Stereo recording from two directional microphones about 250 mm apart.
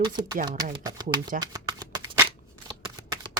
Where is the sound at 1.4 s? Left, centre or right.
Centre.